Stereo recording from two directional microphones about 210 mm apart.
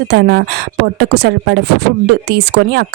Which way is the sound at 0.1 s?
55° right (ahead or behind).